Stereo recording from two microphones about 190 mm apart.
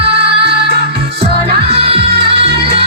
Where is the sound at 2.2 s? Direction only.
60° right (ahead or behind).